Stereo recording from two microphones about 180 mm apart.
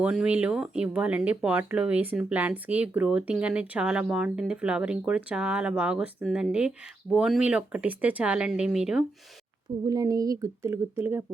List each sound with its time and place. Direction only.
0.0 s speech: 5° right (ahead or behind)
9.8 s speech: 20° right (ahead or behind)